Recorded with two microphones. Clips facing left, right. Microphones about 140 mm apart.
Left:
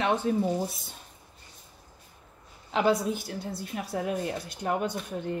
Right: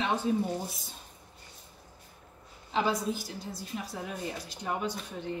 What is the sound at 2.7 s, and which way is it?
Speech, 65° left (ahead or behind).